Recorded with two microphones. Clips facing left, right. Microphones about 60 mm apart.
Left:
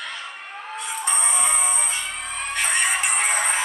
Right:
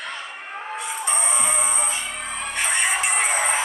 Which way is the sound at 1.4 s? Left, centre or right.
Centre.